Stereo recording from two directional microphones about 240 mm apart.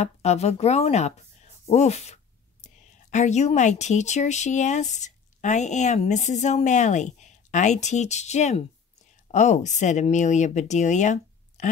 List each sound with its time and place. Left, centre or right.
0.0 s a woman's voice: left